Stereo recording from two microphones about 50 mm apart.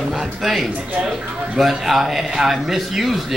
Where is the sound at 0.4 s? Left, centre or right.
Centre.